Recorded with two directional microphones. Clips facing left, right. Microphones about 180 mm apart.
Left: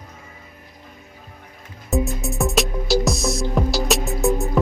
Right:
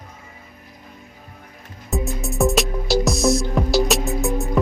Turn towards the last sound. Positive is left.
turn(degrees=0)  # may be behind; listen again after turning